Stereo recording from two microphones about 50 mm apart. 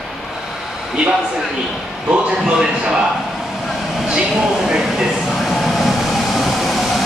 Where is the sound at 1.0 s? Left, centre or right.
Centre.